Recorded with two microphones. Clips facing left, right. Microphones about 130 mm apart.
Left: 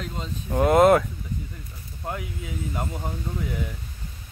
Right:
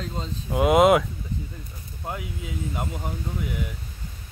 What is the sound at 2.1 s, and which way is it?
Speech, 20° right (ahead or behind).